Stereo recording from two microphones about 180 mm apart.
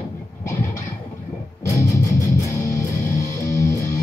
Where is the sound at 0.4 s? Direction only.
15° left (ahead or behind).